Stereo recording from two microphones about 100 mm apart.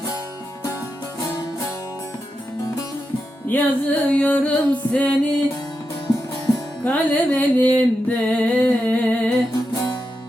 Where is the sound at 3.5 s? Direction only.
20° left (ahead or behind).